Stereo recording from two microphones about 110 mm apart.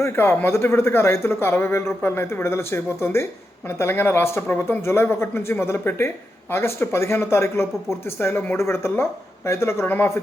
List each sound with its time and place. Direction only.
0.0 s speech: 20° left (ahead or behind)